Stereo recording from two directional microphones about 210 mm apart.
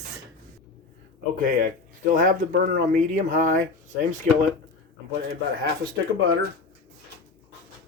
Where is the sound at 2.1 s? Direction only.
40° right (ahead or behind).